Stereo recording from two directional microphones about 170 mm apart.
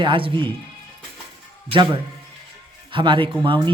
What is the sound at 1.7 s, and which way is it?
Speech, 25° right (ahead or behind).